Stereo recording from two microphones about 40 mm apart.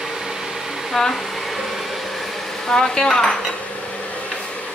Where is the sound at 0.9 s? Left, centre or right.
Centre.